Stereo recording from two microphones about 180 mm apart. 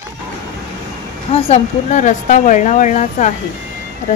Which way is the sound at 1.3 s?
40° left (ahead or behind).